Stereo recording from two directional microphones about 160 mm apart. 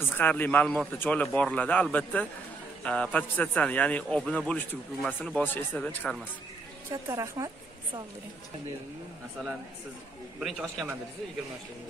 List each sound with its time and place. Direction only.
0.1 s speech: 10° left (ahead or behind)
6.9 s a woman's voice: 20° right (ahead or behind)
10.4 s a man's voice: centre (ahead or behind)